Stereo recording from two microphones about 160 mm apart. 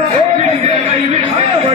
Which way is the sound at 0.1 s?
40° right (ahead or behind).